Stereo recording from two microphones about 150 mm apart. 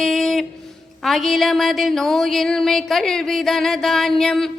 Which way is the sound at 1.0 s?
Centre (ahead or behind).